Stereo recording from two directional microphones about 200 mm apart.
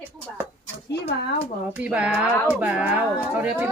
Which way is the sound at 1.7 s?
5° right (ahead or behind).